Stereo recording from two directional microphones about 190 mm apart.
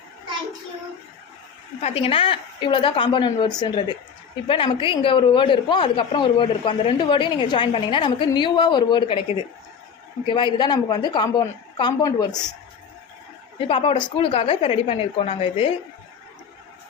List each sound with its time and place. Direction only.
1.8 s speech: 30° left (ahead or behind)
13.6 s speech: 30° left (ahead or behind)